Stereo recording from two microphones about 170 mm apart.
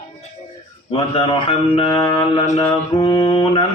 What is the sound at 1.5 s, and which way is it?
Mantra, 35° left (ahead or behind).